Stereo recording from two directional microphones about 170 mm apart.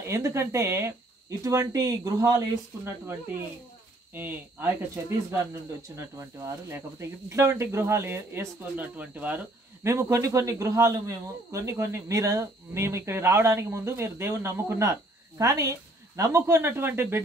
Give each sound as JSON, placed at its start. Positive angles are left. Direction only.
{"t": 0.0, "sound": "speech", "side_deg": -15}